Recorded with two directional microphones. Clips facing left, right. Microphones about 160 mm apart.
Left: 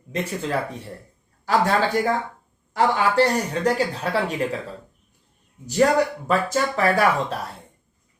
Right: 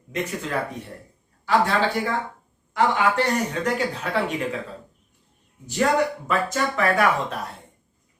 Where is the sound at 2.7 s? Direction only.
35° left (ahead or behind).